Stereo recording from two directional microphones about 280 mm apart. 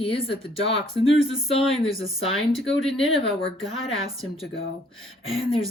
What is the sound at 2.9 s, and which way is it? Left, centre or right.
Speech, centre.